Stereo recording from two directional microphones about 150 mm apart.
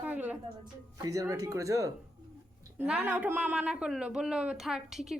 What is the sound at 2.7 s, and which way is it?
Speech, 10° right (ahead or behind).